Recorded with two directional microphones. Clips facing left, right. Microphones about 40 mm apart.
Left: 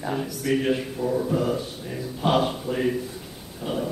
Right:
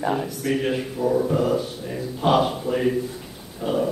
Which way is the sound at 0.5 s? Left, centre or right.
Centre.